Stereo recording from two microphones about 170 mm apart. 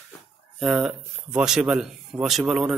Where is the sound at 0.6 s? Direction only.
5° right (ahead or behind).